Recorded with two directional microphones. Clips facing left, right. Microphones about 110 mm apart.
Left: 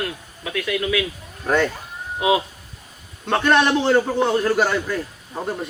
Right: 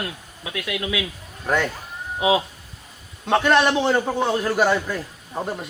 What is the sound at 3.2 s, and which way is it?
Speech, 5° right (ahead or behind).